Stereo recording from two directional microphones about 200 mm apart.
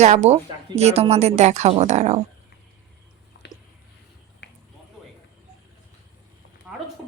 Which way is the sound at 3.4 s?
60° left (ahead or behind).